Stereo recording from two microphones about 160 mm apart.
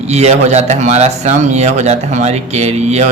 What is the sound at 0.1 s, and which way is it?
Speech, 45° right (ahead or behind).